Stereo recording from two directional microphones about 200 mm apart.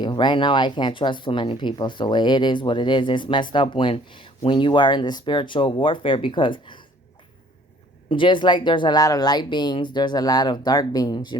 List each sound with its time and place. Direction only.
0.0 s speech: 20° left (ahead or behind)
8.1 s speech: 25° left (ahead or behind)